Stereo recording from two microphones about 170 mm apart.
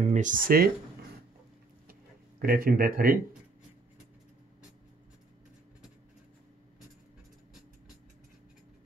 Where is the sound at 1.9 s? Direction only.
60° right (ahead or behind).